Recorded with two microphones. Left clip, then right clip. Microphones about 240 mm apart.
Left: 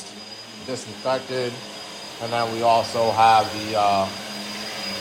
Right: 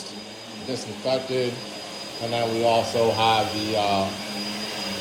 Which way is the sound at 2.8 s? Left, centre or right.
Centre.